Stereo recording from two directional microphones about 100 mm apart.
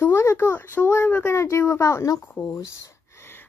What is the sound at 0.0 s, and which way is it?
Speech, 25° left (ahead or behind).